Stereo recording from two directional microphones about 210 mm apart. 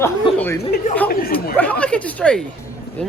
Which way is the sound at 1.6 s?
5° left (ahead or behind).